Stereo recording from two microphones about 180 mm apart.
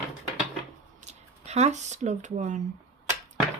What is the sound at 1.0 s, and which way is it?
Speech, 40° right (ahead or behind).